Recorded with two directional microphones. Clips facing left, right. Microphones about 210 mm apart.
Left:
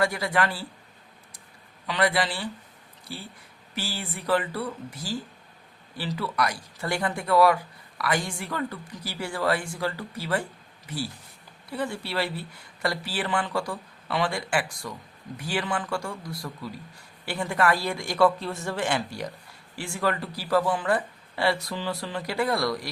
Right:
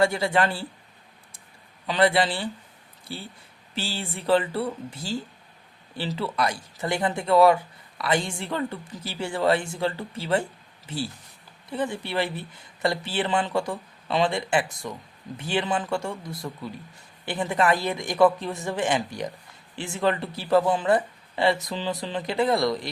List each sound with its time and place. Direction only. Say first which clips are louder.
0.0 s speech: right 3 dB; 25° right (ahead or behind)
1.9 s speech: right 4 dB; 25° right (ahead or behind)